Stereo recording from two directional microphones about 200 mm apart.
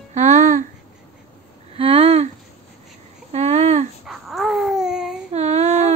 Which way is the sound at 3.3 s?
35° right (ahead or behind).